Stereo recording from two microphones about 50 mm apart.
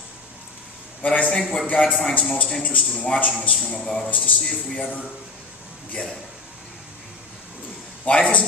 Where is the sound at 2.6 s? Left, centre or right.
Left.